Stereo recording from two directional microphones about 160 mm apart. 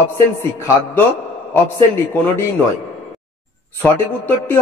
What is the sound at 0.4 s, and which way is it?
Speech, 15° left (ahead or behind).